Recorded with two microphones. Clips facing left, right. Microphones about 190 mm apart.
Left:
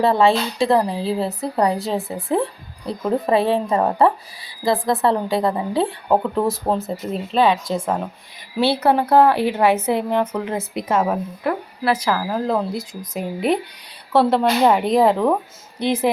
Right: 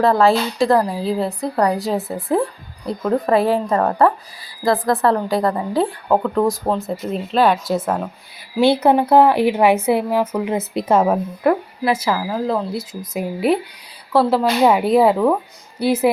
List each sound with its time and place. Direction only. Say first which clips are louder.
0.2 s a woman's voice: right 1 dB; centre (ahead or behind); by 3.9 s 15° left (ahead or behind)
4.6 s speech: right 2 dB; centre (ahead or behind)
8.5 s a woman's voice: right 3 dB; 15° right (ahead or behind)
10.8 s a woman's voice: right 4 dB; 35° right (ahead or behind)
11.4 s speech: right 6 dB; 50° right (ahead or behind)
11.8 s a woman's voice: right 1 dB; 10° right (ahead or behind)